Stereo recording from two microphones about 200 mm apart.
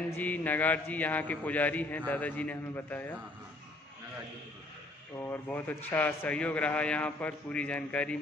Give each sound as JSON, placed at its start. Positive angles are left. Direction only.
{"t": 0.1, "sound": "a man's voice", "side_deg": 10}
{"t": 5.2, "sound": "a man's voice", "side_deg": 10}